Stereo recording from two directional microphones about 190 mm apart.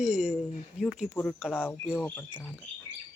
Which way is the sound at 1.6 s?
10° left (ahead or behind).